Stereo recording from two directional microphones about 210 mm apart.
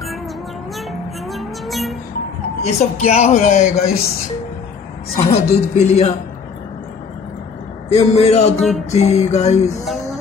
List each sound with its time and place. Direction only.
0.7 s music: centre (ahead or behind)
2.6 s speech: 30° left (ahead or behind)
5.2 s a woman's voice: 30° left (ahead or behind)
7.9 s speech: 30° left (ahead or behind)
8.5 s music: centre (ahead or behind)
8.9 s speech: 30° left (ahead or behind)